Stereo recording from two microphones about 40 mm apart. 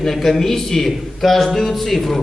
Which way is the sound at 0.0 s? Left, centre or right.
Centre.